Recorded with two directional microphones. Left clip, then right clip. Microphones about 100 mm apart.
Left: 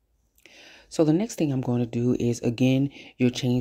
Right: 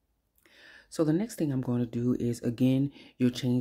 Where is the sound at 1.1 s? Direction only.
30° left (ahead or behind).